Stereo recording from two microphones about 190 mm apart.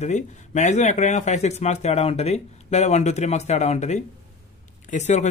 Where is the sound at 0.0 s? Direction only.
40° left (ahead or behind).